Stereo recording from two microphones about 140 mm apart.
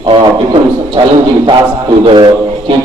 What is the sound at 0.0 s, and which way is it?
A man's voice, 35° right (ahead or behind).